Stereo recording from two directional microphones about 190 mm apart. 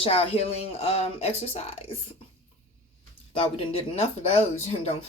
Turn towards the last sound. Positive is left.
turn(degrees=35)  # may be behind; listen again after turning